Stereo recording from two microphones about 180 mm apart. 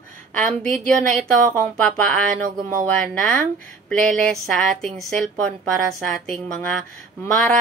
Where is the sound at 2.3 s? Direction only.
45° right (ahead or behind).